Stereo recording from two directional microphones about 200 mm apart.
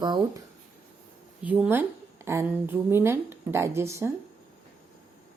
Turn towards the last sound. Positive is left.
turn(degrees=-15)  # may be behind; listen again after turning